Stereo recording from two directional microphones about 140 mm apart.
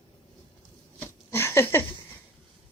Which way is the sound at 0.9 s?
20° left (ahead or behind).